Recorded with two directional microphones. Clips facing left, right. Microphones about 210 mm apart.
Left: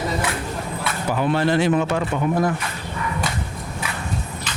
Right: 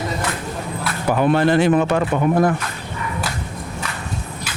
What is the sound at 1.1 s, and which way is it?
Speech, 55° right (ahead or behind).